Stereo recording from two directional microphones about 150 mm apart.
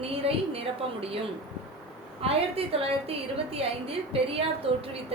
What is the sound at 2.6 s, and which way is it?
A woman's voice, 40° right (ahead or behind).